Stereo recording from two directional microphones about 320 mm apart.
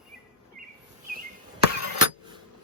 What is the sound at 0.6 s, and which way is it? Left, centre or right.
Bird vocalization, right.